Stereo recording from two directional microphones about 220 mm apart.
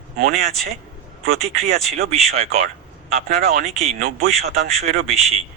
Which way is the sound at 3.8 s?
30° right (ahead or behind).